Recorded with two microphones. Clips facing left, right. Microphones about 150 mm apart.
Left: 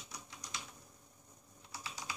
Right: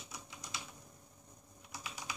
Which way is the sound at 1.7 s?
15° right (ahead or behind).